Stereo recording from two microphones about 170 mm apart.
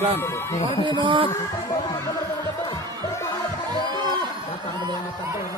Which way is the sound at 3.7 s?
25° left (ahead or behind).